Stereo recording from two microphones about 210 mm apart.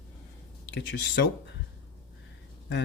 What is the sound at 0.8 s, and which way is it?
Speech, 60° left (ahead or behind).